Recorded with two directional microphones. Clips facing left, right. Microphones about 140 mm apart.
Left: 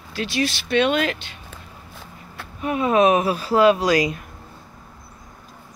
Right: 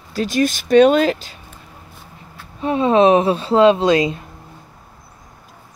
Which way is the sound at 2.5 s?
30° right (ahead or behind).